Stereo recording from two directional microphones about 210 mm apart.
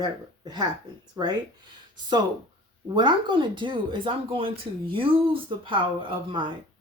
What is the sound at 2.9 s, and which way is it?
Speech, 20° right (ahead or behind).